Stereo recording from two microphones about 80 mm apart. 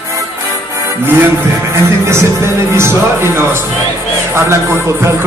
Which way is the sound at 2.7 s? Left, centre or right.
Right.